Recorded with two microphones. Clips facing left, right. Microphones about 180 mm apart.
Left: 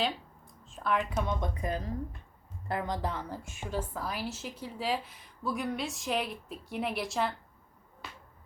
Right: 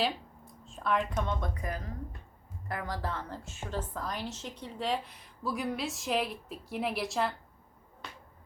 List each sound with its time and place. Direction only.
0.6 s a woman's voice: centre (ahead or behind)
1.6 s a woman's voice: 25° left (ahead or behind); by 7.3 s centre (ahead or behind)
8.0 s a sound: 5° left (ahead or behind)